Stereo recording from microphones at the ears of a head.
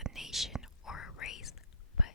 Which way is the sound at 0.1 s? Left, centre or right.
Centre.